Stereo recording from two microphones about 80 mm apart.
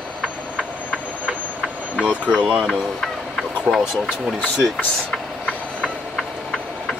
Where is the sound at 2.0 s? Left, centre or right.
Centre.